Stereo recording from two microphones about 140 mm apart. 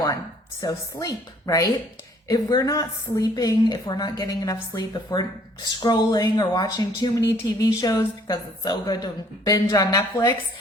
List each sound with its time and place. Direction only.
0.6 s a woman's voice: 25° left (ahead or behind)